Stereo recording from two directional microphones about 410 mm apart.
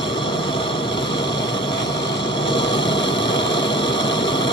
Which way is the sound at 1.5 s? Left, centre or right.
Centre.